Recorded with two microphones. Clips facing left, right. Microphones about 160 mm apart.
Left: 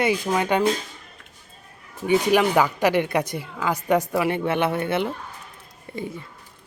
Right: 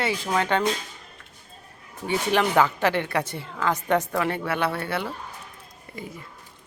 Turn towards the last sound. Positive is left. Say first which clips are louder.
# left 6 dB
turn(degrees=25)  # may be behind; listen again after turning